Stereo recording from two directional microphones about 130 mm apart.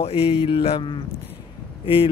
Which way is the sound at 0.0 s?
50° left (ahead or behind).